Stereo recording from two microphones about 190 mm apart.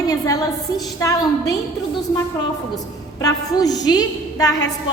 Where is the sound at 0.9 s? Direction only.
20° left (ahead or behind).